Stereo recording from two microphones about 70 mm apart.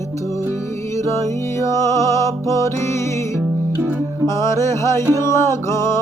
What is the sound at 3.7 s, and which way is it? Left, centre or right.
Music, right.